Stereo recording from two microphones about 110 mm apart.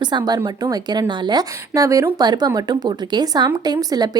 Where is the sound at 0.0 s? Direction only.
40° right (ahead or behind).